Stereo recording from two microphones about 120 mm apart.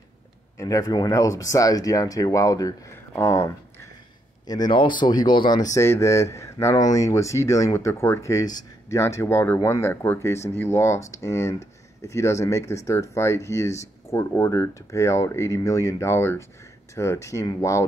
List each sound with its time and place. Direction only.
0.6 s speech: 30° left (ahead or behind)
4.5 s speech: 35° left (ahead or behind)